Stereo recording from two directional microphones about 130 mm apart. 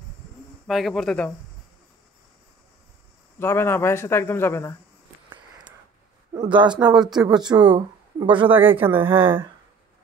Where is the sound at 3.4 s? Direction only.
20° left (ahead or behind).